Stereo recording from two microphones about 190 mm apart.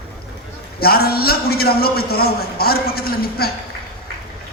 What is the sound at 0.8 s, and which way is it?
A man's voice, 55° left (ahead or behind).